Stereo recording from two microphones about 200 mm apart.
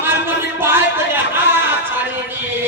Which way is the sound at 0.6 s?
10° right (ahead or behind).